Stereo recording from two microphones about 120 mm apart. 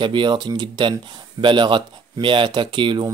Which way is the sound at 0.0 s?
40° right (ahead or behind).